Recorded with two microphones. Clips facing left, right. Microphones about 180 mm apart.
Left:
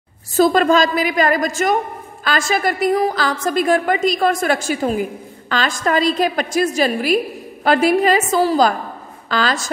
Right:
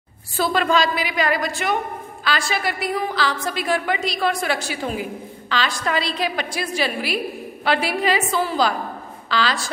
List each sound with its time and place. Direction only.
0.4 s a woman's voice: 45° left (ahead or behind)